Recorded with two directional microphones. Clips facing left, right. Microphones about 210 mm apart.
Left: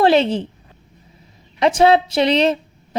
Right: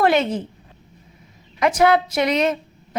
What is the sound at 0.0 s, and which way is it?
Speech, 30° left (ahead or behind).